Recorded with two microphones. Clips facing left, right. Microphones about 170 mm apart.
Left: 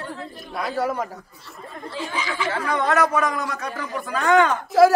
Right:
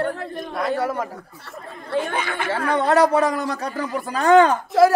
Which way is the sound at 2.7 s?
30° right (ahead or behind).